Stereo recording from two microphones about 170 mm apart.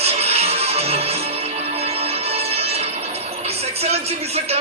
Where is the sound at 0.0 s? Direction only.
35° right (ahead or behind).